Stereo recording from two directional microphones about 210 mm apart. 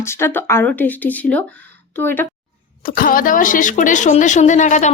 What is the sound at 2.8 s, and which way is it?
A woman's voice, 40° left (ahead or behind).